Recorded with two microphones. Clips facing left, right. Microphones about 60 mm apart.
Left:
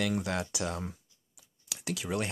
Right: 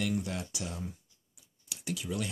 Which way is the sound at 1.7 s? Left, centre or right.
Left.